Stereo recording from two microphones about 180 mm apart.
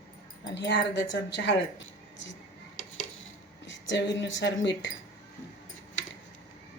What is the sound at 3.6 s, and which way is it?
Speech, 85° left.